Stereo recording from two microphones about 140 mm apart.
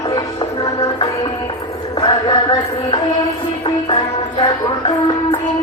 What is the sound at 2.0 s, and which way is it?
Mantra, 35° left (ahead or behind).